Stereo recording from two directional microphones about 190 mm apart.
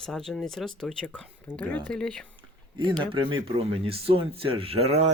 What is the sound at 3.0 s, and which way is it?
Speech, 25° right (ahead or behind).